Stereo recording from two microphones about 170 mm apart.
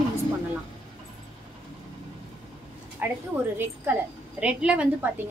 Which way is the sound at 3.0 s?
10° right (ahead or behind).